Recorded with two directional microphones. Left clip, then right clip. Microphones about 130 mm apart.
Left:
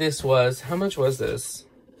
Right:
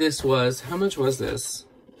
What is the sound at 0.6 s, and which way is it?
Speech, 50° right (ahead or behind).